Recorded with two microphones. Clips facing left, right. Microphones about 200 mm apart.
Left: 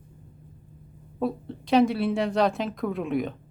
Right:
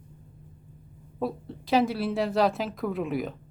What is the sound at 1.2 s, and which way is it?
Speech, centre (ahead or behind).